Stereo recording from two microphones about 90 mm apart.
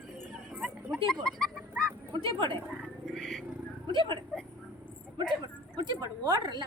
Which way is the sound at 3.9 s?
65° right (ahead or behind).